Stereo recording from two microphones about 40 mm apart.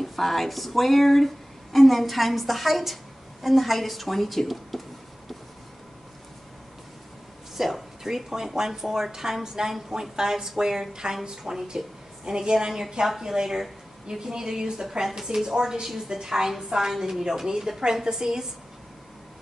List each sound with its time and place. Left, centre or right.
0.0 s speech: centre
7.5 s speech: centre